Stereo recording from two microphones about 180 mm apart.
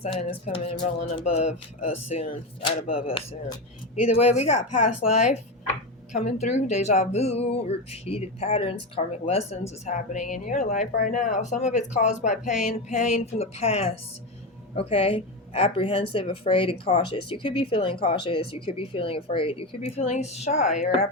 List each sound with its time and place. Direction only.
0.0 s speech: 30° left (ahead or behind)